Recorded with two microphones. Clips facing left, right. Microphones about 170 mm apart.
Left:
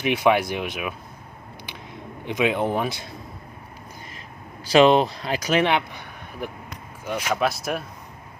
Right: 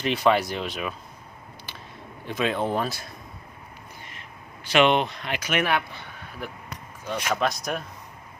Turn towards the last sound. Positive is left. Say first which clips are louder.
# left 2 dB
turn(degrees=5)  # may be behind; listen again after turning